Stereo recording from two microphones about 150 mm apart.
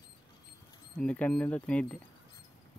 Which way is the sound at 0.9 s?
10° left (ahead or behind).